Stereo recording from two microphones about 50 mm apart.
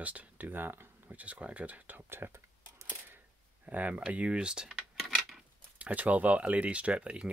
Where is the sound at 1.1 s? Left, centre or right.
Right.